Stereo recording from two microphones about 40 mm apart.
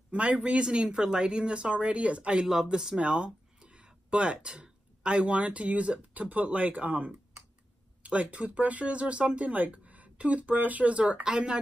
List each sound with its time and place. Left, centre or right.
0.1 s speech: right
2.4 s speech: centre
3.0 s speech: right
11.2 s speech: centre